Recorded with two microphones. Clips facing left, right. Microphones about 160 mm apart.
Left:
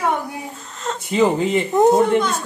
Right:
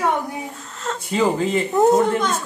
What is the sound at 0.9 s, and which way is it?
Speech, 20° left (ahead or behind).